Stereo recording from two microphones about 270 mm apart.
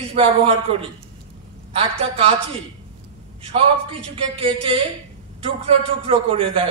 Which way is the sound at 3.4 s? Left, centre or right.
Centre.